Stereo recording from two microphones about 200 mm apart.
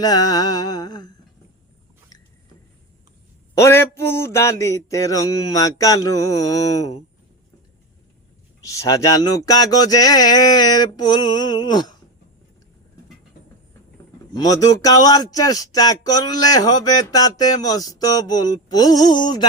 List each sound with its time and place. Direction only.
0.0 s speech: 20° left (ahead or behind)
3.6 s a sound: 15° left (ahead or behind)
8.6 s speech: 15° left (ahead or behind)
14.3 s speech: 20° left (ahead or behind)